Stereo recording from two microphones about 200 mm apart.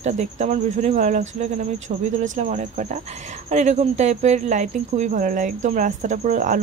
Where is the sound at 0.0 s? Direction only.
35° right (ahead or behind).